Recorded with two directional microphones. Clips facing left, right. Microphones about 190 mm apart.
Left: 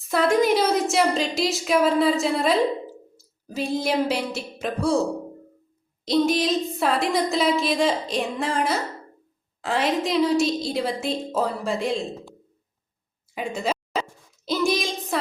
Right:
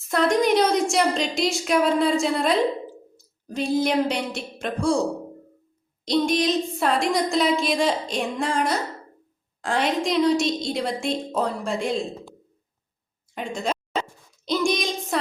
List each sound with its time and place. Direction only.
0.1 s a woman's voice: 5° left (ahead or behind)
6.1 s a woman's voice: centre (ahead or behind)
13.3 s a sound: 5° left (ahead or behind)